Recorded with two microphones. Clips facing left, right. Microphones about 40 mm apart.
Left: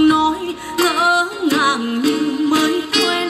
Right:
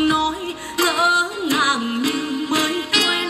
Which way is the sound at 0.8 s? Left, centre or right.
Left.